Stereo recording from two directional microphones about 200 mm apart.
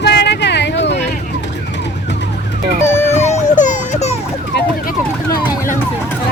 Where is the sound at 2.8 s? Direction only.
10° left (ahead or behind).